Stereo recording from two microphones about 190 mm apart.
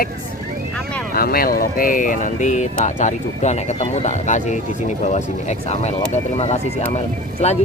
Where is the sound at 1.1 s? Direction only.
50° left (ahead or behind).